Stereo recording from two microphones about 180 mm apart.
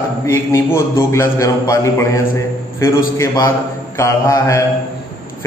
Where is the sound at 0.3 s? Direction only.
15° left (ahead or behind).